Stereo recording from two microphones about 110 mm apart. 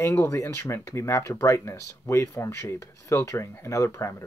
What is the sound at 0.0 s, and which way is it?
Speech, 20° left (ahead or behind).